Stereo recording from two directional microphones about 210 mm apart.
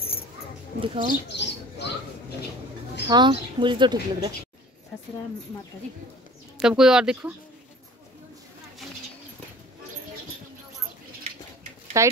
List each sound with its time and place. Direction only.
0.7 s speech: 25° right (ahead or behind)
1.3 s a sound: 55° left (ahead or behind)
3.1 s speech: 20° right (ahead or behind)
6.6 s speech: 5° right (ahead or behind)
12.0 s speech: 15° right (ahead or behind)